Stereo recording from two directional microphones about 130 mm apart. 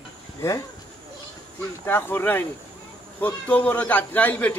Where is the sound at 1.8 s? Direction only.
15° left (ahead or behind).